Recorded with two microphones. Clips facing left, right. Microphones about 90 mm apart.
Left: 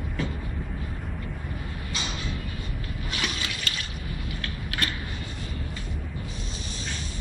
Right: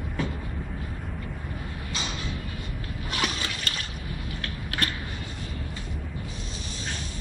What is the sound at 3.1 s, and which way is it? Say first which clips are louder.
Water: right 3 dB; 45° right (ahead or behind).